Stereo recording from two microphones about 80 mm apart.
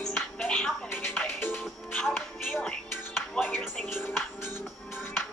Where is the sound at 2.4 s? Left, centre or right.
Centre.